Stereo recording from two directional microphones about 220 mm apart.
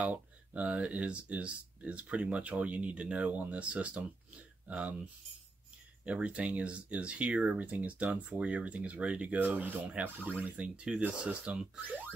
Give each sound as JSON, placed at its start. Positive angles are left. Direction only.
{"t": 0.0, "sound": "speech", "side_deg": -5}
{"t": 6.0, "sound": "speech", "side_deg": -5}